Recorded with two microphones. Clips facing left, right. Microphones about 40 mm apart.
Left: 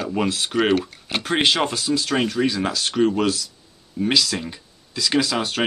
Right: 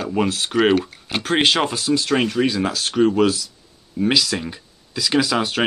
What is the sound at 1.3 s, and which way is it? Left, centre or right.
Speech, centre.